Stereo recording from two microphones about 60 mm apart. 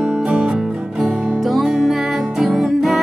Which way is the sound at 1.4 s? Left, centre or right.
Centre.